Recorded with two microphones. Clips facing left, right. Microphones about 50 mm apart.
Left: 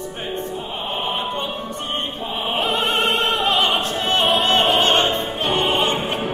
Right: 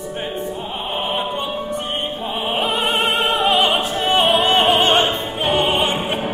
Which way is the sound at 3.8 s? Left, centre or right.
Centre.